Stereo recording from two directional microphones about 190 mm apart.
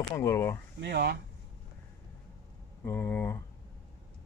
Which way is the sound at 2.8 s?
10° left (ahead or behind).